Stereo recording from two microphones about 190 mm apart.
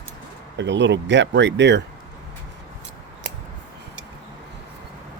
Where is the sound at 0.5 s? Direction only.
70° right (ahead or behind).